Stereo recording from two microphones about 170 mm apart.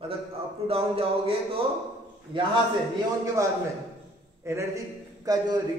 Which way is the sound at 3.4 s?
20° right (ahead or behind).